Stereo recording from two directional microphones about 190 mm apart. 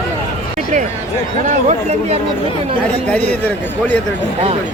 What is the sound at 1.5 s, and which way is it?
Speech, 35° right (ahead or behind).